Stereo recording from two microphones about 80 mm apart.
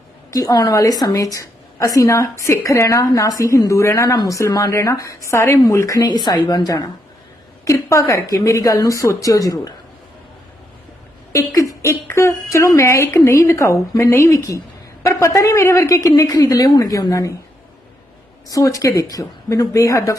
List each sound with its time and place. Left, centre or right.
0.3 s a woman's voice: left
6.0 s speech: left
7.6 s a woman's voice: left
11.3 s a woman's voice: left
18.4 s a woman's voice: left